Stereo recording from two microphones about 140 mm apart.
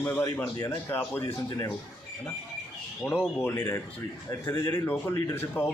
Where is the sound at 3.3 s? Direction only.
20° left (ahead or behind).